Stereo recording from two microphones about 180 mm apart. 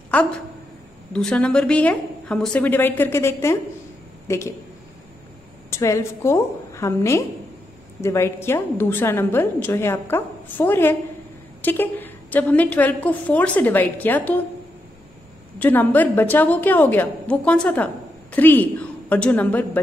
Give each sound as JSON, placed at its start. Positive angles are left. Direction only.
{"t": 0.1, "sound": "a woman's voice", "side_deg": 10}
{"t": 5.7, "sound": "a woman's voice", "side_deg": 15}
{"t": 15.6, "sound": "a woman's voice", "side_deg": 10}